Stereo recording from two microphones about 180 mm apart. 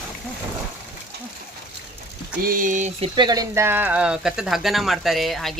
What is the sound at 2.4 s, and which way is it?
Speech, 50° right (ahead or behind).